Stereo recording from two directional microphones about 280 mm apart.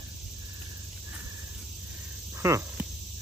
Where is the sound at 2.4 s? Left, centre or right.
Centre.